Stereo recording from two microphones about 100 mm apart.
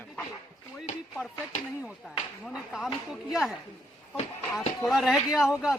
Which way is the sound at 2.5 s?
5° right (ahead or behind).